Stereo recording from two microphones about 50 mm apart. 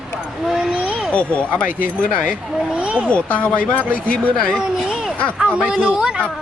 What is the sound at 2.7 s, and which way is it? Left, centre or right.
Speech, right.